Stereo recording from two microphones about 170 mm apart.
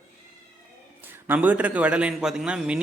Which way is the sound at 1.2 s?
10° right (ahead or behind).